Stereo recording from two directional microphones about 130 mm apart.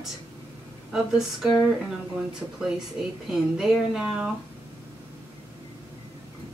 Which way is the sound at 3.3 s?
5° right (ahead or behind).